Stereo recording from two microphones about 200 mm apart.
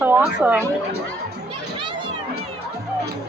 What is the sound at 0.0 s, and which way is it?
Speech, 10° right (ahead or behind).